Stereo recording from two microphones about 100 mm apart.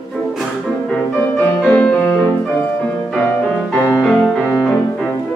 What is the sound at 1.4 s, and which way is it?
Music, 15° left (ahead or behind).